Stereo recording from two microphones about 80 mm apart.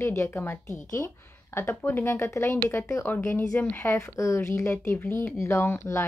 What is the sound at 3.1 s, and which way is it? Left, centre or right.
Speech, left.